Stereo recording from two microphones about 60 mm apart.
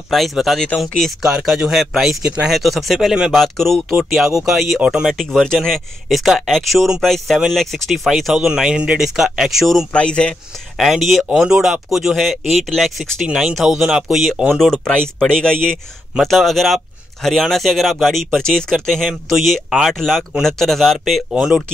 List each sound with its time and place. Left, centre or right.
0.1 s speech: centre
1.6 s speech: centre
4.7 s speech: centre
5.1 s speech: centre
8.5 s speech: centre
9.9 s speech: centre
10.8 s speech: centre
11.2 s speech: centre
13.3 s speech: centre